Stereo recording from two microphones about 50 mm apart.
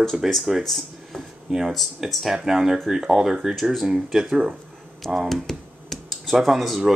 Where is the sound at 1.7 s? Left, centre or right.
Centre.